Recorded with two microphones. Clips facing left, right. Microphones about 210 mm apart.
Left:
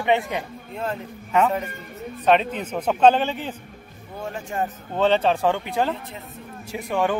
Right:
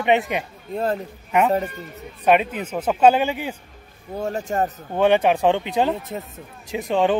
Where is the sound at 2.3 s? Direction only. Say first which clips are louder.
Right 1 dB; 10° right (ahead or behind).